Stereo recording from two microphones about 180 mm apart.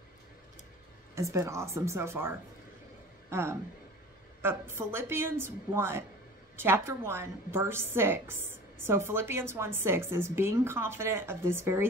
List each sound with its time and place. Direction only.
1.1 s a woman's voice: 15° right (ahead or behind)